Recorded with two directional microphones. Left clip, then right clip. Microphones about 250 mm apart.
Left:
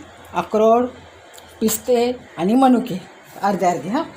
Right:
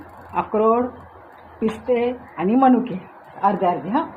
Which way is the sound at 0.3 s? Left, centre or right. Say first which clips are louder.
Left 3 dB; left.